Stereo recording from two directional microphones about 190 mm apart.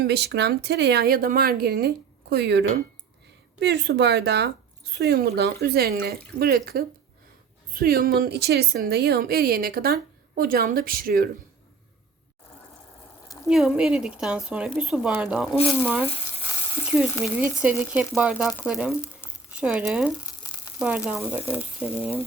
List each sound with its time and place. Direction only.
0.0 s a woman's voice: 60° right (ahead or behind)
13.2 s frying: 20° left (ahead or behind)
13.5 s speech: 5° right (ahead or behind)
16.0 s frying: 30° left (ahead or behind)
17.4 s speech: 5° right (ahead or behind)